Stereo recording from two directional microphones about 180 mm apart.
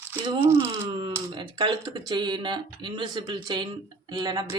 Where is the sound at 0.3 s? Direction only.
15° right (ahead or behind).